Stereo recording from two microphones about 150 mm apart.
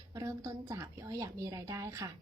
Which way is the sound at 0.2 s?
20° right (ahead or behind).